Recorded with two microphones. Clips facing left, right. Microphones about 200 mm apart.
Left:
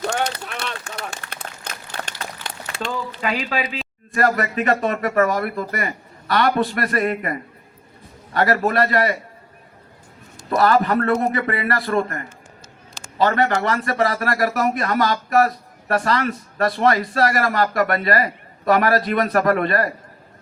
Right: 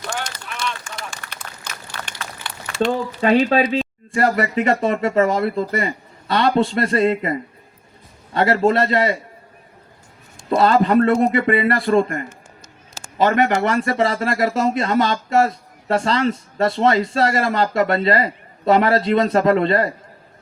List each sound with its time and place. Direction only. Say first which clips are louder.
0.1 s run: left 5 dB; 60° left (ahead or behind)
3.2 s speech: right 10 dB; 30° right (ahead or behind)
10.5 s speech: right 3 dB; 25° right (ahead or behind)